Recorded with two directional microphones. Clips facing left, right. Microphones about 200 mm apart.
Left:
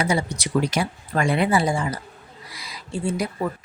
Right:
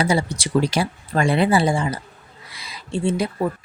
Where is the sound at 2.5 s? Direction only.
25° right (ahead or behind).